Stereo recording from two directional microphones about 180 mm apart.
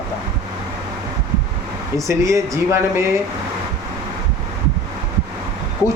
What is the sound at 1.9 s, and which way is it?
Speech, 15° right (ahead or behind).